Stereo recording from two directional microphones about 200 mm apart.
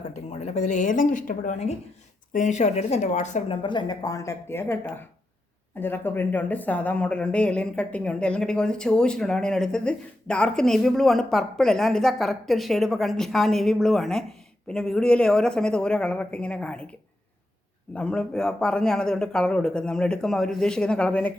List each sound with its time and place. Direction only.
0.3 s speech: 35° left (ahead or behind)
3.6 s speech: 25° left (ahead or behind); by 16.8 s 5° left (ahead or behind)
17.9 s speech: 5° left (ahead or behind)